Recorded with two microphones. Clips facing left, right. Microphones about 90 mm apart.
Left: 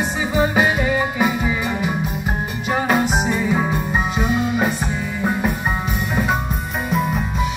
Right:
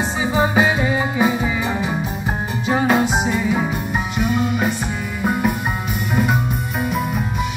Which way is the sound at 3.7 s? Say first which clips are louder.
Left 2 dB; 30° left (ahead or behind).